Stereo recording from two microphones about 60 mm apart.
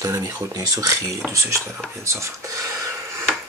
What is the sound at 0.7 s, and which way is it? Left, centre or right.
Speech, right.